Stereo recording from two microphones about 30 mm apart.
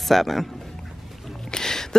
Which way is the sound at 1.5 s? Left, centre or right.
Centre.